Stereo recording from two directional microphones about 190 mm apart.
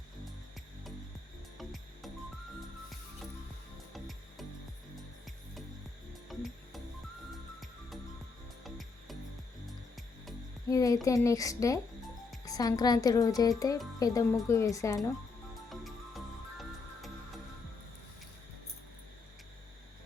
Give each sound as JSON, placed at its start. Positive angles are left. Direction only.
{"t": 3.9, "sound": "music", "side_deg": 0}
{"t": 6.2, "sound": "music", "side_deg": 0}
{"t": 8.6, "sound": "music", "side_deg": 0}
{"t": 10.7, "sound": "a woman's voice", "side_deg": 15}
{"t": 15.7, "sound": "music", "side_deg": 0}